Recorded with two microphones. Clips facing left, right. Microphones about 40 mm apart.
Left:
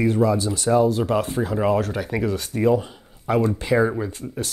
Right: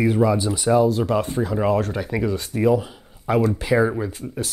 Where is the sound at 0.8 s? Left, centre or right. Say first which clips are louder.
Even; centre.